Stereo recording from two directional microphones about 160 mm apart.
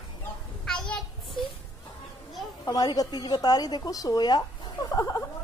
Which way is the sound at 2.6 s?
25° left (ahead or behind).